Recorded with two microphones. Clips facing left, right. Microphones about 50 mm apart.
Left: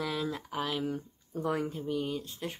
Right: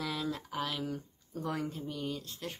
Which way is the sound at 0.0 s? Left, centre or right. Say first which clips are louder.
Left 2 dB; centre.